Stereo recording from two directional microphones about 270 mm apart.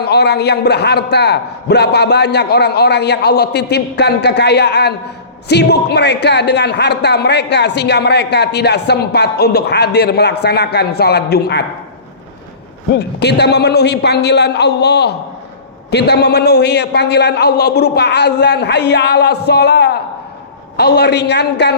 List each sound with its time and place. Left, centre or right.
0.0 s a man's voice: left
13.0 s a man's voice: left